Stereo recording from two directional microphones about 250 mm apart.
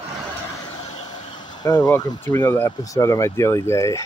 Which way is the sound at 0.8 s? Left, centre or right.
Left.